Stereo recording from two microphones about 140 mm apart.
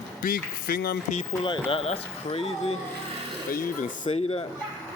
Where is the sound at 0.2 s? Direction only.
90° left.